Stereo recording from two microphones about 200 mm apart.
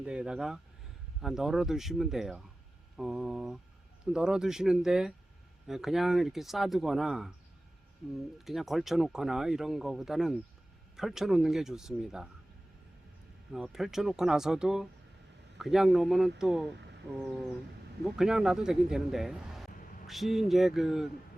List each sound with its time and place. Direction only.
0.0 s speech: 5° right (ahead or behind)
13.5 s speech: centre (ahead or behind)
16.7 s a sound: 60° right (ahead or behind)
18.0 s speech: centre (ahead or behind)